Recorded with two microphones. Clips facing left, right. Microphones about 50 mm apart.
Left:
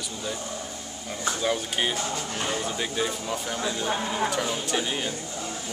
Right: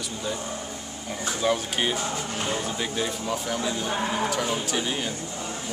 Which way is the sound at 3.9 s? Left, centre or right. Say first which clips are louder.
Right 2 dB; centre.